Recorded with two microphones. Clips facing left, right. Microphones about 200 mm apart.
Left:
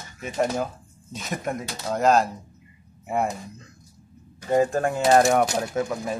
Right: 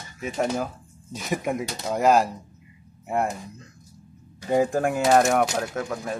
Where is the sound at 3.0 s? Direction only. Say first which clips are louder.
Even; centre (ahead or behind).